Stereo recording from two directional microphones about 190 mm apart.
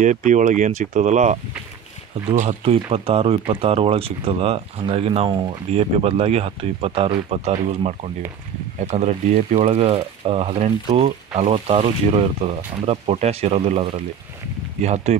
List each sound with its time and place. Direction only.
0.0 s speech: 40° right (ahead or behind)